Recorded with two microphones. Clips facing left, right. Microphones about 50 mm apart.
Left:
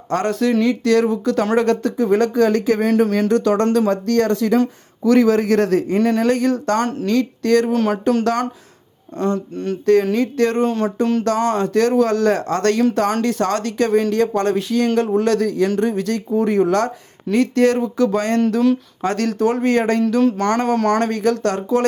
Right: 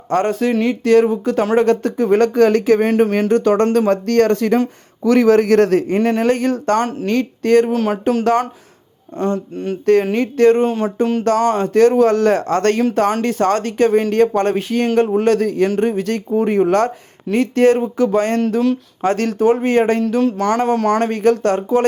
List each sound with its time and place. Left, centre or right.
0.1 s a man's voice: right
7.7 s a sound: centre
9.1 s speech: centre
9.8 s speech: right
10.6 s speech: centre
11.7 s speech: right
20.0 s speech: centre
20.2 s a sound: centre
20.7 s speech: centre
21.0 s speech: right